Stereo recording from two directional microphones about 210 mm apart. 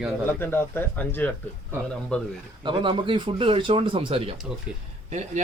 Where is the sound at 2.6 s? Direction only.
25° right (ahead or behind).